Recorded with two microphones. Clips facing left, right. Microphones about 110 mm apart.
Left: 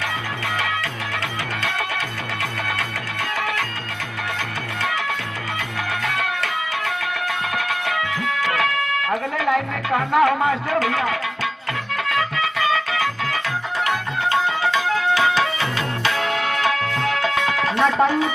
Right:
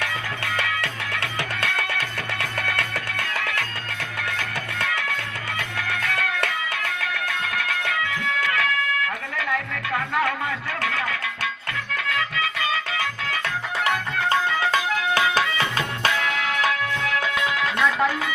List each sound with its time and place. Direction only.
0.8 s music: 65° right (ahead or behind)
7.5 s music: 25° left (ahead or behind)
17.3 s music: 35° left (ahead or behind)